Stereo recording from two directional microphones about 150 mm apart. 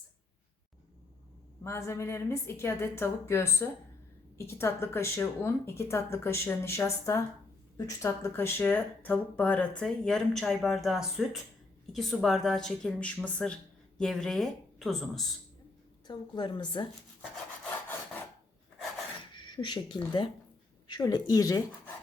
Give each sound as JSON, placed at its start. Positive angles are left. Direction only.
{"t": 1.6, "sound": "a woman's voice", "side_deg": 15}
{"t": 16.0, "sound": "a woman's voice", "side_deg": 30}
{"t": 19.3, "sound": "a sound", "side_deg": 30}
{"t": 20.8, "sound": "a woman's voice", "side_deg": 25}